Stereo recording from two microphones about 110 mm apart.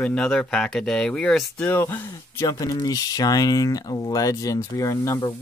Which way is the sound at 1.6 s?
20° left (ahead or behind).